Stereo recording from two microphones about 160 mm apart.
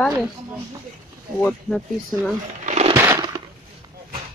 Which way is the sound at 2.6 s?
45° right (ahead or behind).